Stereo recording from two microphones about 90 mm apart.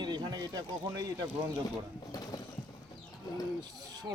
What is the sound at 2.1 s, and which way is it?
Vehicle, 45° left (ahead or behind).